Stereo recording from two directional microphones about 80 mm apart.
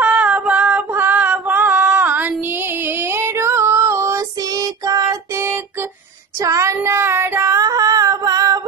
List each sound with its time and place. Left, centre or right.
0.0 s female singing: centre; by 4.2 s right
4.4 s child singing: right
6.4 s child singing: right
7.5 s a sound: right